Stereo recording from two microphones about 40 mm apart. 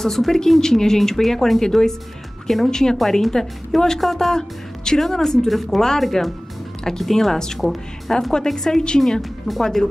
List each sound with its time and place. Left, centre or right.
0.0 s speech: centre
2.7 s speech: centre
5.5 s speech: centre
9.2 s speech: centre